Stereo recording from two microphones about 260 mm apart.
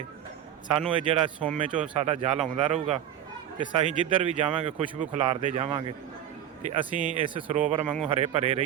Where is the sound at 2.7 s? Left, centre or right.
Right.